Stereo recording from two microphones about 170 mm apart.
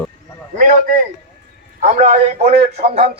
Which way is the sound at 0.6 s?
50° right (ahead or behind).